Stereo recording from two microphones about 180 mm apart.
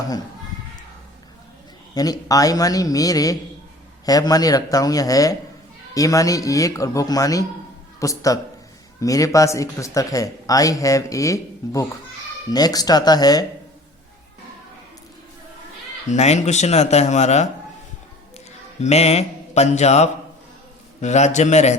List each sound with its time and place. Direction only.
2.0 s speech: 20° left (ahead or behind)
16.0 s a man's voice: 40° left (ahead or behind)
18.8 s a man's voice: 35° left (ahead or behind)